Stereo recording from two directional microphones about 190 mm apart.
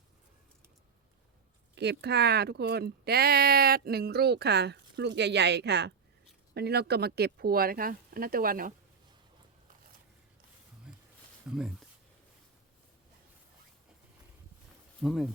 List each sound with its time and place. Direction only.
1.7 s speech: 60° right (ahead or behind)
10.9 s a sound: 5° right (ahead or behind)
11.4 s speech: 5° right (ahead or behind)
15.0 s speech: centre (ahead or behind)